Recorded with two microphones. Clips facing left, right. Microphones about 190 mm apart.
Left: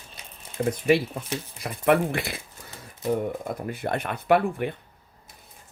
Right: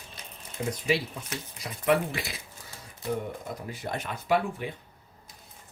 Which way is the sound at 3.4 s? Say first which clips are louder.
Left 6 dB; 60° left (ahead or behind).